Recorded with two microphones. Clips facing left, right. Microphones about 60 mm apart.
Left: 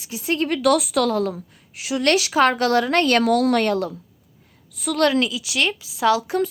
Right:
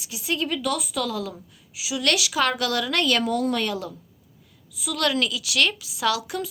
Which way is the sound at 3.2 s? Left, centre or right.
Left.